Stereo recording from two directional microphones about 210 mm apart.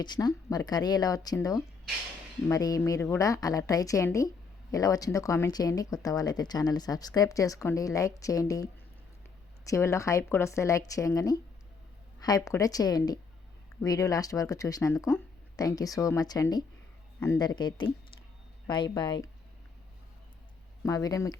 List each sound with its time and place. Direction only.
0.0 s speech: 20° left (ahead or behind)
9.6 s speech: 15° left (ahead or behind)
20.8 s speech: 15° left (ahead or behind)